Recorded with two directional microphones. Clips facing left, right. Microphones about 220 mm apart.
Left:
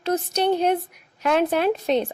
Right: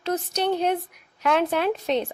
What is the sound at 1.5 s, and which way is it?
Speech, 40° left (ahead or behind).